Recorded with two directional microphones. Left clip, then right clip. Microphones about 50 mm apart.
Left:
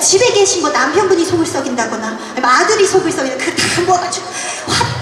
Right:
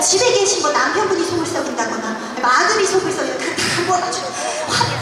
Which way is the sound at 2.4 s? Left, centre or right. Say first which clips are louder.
Left 4 dB; left.